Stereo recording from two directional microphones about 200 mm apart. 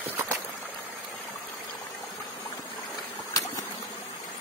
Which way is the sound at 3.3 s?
15° left (ahead or behind).